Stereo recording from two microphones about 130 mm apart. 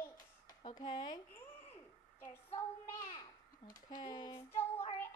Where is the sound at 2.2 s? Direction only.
20° left (ahead or behind); by 4.4 s 35° left (ahead or behind).